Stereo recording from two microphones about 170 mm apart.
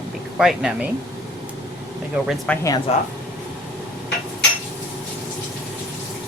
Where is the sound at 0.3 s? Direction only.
5° right (ahead or behind).